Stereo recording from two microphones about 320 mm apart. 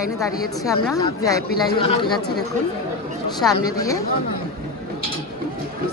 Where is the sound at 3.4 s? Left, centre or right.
Centre.